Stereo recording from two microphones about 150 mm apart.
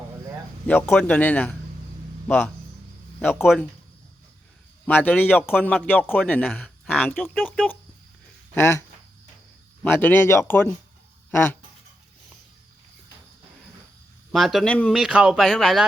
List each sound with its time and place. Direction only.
0.7 s speech: 10° left (ahead or behind)
3.4 s speech: centre (ahead or behind)
4.9 s speech: 10° left (ahead or behind)
9.8 s speech: 15° left (ahead or behind)
14.3 s speech: centre (ahead or behind)